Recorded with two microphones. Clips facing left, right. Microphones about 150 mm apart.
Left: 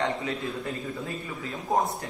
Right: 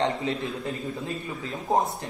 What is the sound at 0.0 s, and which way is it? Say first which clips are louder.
Speech: right 3 dB; 25° right (ahead or behind).